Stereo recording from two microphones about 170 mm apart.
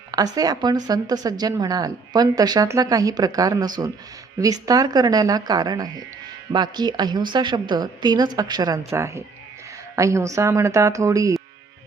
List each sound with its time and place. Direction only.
0.1 s speech: 20° right (ahead or behind)